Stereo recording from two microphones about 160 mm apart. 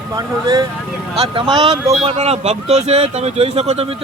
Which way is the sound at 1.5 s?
40° right (ahead or behind).